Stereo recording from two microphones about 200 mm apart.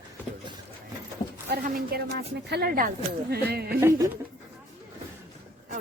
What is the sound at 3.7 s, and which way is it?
Speech, 15° right (ahead or behind).